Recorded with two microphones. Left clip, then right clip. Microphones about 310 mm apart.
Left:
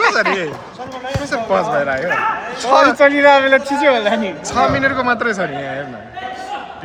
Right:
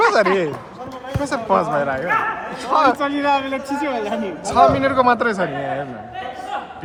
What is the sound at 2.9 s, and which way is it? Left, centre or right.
A man's voice, left.